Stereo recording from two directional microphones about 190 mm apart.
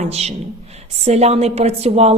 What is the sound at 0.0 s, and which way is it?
A man's voice, 35° right (ahead or behind).